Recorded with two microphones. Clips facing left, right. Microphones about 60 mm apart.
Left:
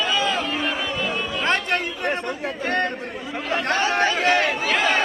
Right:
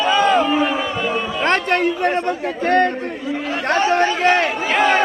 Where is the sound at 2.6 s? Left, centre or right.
Right.